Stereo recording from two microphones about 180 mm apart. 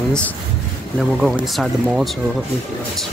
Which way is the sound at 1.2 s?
5° right (ahead or behind).